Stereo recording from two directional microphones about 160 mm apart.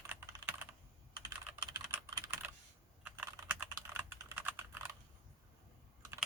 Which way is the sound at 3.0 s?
10° right (ahead or behind).